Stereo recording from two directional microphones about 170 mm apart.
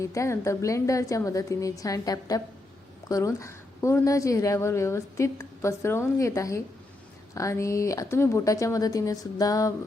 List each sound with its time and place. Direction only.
0.0 s a woman's voice: 20° left (ahead or behind)